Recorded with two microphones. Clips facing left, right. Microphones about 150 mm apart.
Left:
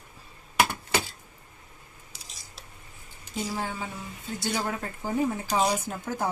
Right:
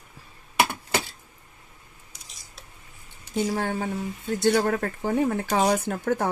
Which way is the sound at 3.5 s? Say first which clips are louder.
Right 6 dB; 60° right (ahead or behind).